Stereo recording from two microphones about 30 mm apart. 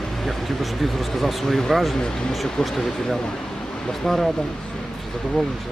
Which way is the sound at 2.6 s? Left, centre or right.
Centre.